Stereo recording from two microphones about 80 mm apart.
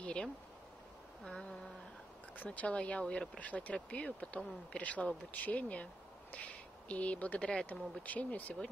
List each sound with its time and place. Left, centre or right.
0.0 s a sound: centre
1.2 s speech: centre
2.3 s speech: left